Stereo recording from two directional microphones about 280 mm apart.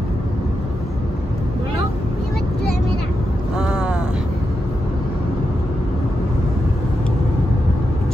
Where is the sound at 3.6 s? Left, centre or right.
Centre.